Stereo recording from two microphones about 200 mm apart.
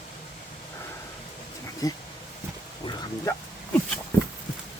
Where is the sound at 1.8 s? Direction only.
20° left (ahead or behind).